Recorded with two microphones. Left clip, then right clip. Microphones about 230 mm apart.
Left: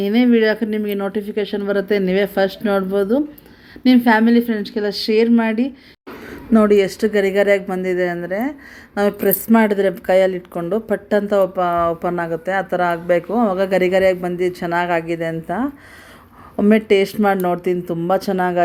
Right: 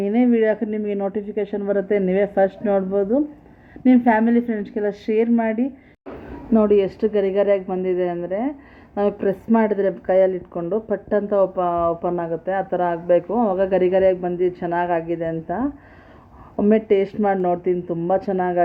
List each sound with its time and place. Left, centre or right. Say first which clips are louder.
0.0 s speech: left 3 dB; centre